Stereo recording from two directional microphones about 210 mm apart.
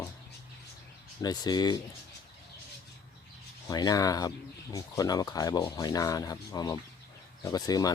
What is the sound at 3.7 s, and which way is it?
Speech, 15° left (ahead or behind).